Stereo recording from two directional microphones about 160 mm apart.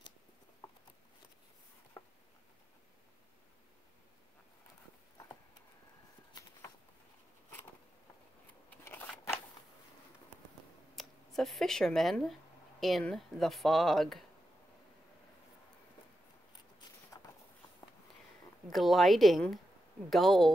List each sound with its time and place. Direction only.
8.6 s scissors: 10° left (ahead or behind)
11.0 s speech: centre (ahead or behind)
17.1 s a sound: 25° left (ahead or behind)
18.7 s speech: centre (ahead or behind)